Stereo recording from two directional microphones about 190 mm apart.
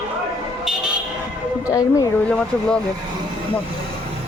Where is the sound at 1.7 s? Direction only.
20° left (ahead or behind).